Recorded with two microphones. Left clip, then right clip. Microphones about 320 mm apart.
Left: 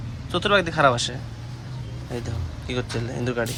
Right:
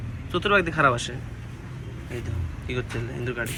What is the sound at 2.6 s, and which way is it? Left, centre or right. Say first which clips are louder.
Speech: left 3 dB; centre.